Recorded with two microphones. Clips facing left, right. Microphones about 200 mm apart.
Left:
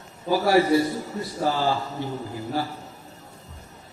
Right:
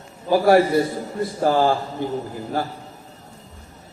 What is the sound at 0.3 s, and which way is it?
A man's voice, 55° right (ahead or behind).